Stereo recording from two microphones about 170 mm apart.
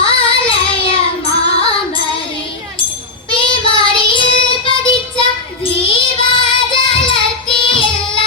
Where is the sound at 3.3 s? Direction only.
30° left (ahead or behind).